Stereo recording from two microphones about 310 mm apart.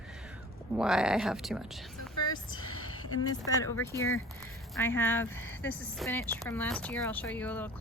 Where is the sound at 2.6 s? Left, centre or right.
Left.